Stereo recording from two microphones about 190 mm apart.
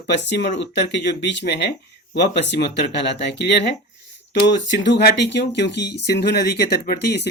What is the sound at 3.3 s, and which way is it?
Speech, 60° left (ahead or behind).